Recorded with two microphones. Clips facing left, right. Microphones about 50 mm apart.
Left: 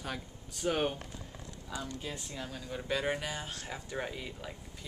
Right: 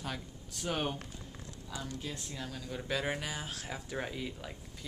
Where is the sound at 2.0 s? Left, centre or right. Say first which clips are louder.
Left 1 dB; centre.